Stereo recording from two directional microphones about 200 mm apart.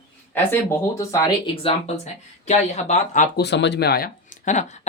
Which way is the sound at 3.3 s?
60° left (ahead or behind).